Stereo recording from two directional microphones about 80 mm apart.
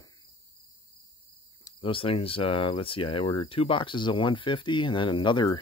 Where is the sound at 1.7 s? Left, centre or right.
Left.